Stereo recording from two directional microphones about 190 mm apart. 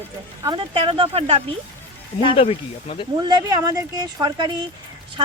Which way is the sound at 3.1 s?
20° right (ahead or behind).